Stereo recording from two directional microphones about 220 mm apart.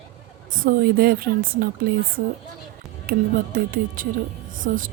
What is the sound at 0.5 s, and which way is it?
Speech, 40° right (ahead or behind).